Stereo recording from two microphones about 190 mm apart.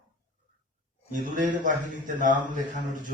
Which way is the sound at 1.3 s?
40° right (ahead or behind).